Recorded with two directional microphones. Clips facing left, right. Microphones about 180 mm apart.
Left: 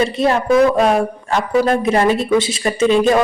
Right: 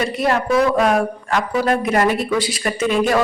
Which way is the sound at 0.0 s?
25° left (ahead or behind).